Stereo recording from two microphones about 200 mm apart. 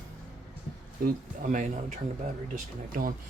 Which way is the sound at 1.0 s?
50° right (ahead or behind).